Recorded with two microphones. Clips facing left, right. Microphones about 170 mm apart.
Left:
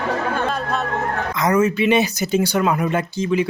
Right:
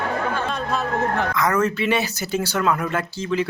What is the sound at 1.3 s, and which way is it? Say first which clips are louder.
Speech: left 7 dB; 20° left (ahead or behind).